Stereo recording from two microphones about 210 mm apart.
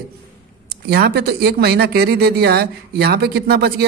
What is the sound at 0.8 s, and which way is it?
Speech, 50° right (ahead or behind).